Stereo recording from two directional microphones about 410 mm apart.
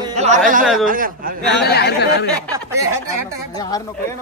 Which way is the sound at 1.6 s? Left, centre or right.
Left.